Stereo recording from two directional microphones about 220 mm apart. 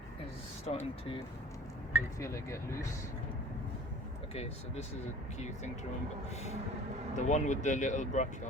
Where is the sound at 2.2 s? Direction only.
15° left (ahead or behind).